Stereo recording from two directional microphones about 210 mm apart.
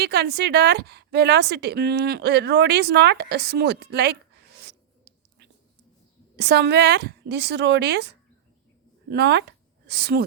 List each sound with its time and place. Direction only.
0.0 s a woman's voice: 50° right (ahead or behind)
4.5 s writing: 50° right (ahead or behind)
6.3 s a woman's voice: 50° right (ahead or behind)